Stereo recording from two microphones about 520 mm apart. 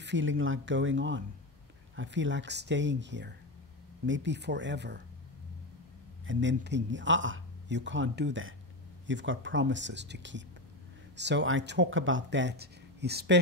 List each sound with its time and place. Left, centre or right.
0.0 s speech: right
6.2 s speech: right